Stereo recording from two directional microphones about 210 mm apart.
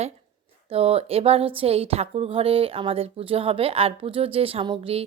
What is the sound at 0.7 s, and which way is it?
Speech, 30° right (ahead or behind).